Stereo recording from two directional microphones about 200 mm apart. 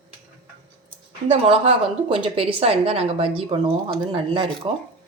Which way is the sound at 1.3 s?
25° right (ahead or behind).